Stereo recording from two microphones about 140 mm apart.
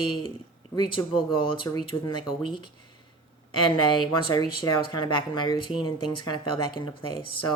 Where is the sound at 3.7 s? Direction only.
35° left (ahead or behind).